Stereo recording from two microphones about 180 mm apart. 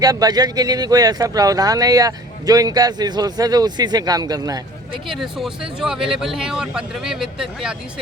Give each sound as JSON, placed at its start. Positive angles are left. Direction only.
{"t": 0.0, "sound": "speech", "side_deg": -20}
{"t": 5.0, "sound": "speech", "side_deg": 0}